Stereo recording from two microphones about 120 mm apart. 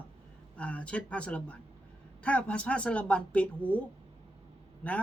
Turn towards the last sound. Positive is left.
turn(degrees=10)  # may be behind; listen again after turning